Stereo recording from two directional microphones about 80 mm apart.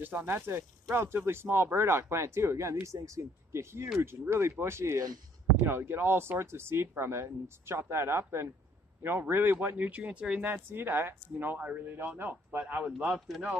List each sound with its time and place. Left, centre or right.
0.0 s a man's voice: right
10.4 s a man's voice: right
13.3 s speech: centre